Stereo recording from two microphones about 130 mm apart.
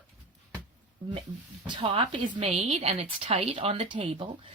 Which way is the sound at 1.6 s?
45° right (ahead or behind).